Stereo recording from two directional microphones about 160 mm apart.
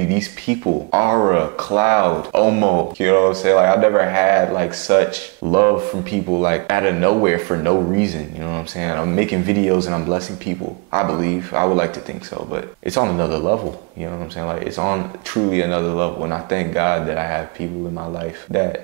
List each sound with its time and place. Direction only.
0.5 s speech: 15° right (ahead or behind)
12.9 s speech: 20° right (ahead or behind)